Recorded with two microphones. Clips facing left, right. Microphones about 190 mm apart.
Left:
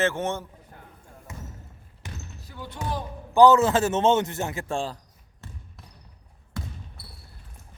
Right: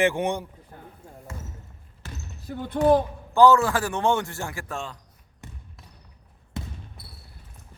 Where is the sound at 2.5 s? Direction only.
55° right (ahead or behind).